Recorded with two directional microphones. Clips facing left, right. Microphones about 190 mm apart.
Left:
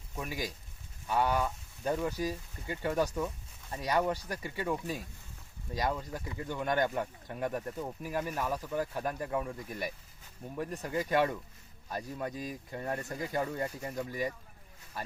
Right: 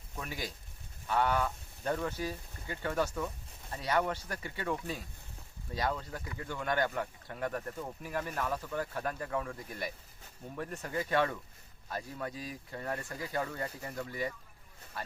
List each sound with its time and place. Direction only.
0.2 s speech: 15° left (ahead or behind)
12.3 s speech: 50° left (ahead or behind)
12.7 s speech: 20° left (ahead or behind)